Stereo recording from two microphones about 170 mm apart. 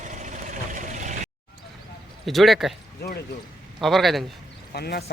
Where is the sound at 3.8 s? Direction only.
Centre (ahead or behind).